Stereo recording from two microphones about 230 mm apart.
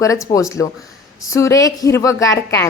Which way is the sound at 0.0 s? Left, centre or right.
Centre.